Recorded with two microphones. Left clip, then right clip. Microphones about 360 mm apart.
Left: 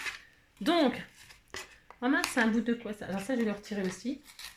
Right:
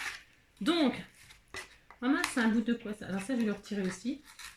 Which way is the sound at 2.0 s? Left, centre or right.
Centre.